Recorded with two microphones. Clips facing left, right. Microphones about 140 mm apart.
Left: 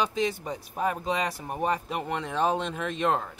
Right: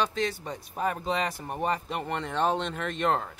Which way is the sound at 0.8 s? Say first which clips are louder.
Left 1 dB; centre (ahead or behind).